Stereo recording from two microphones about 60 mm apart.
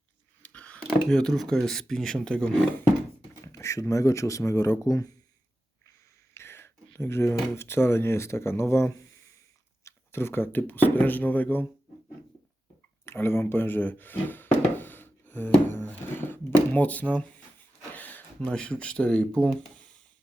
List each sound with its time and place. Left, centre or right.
0.4 s a sound: left
0.8 s speech: centre
3.4 s speech: left
6.3 s whispering: left
7.0 s speech: left
13.1 s a sound: left
16.7 s speech: left
17.9 s a sound: left
18.3 s speech: centre